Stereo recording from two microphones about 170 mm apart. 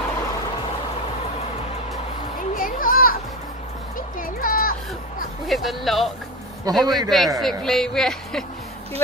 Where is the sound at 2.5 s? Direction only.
55° left (ahead or behind).